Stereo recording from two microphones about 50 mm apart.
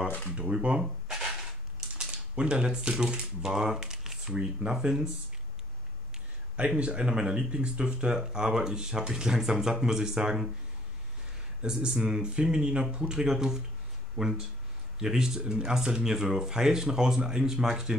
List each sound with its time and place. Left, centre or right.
0.4 s speech: right
1.0 s a sound: centre
2.0 s speech: right
3.4 s speech: centre
6.8 s speech: centre
11.6 s speech: centre